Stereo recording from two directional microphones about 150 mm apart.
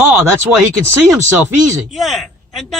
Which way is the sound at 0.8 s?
15° right (ahead or behind).